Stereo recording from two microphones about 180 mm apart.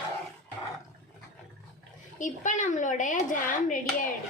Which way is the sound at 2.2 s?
45° left (ahead or behind).